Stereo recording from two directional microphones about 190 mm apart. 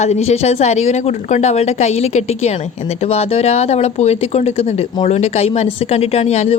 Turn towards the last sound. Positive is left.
turn(degrees=35)  # may be behind; listen again after turning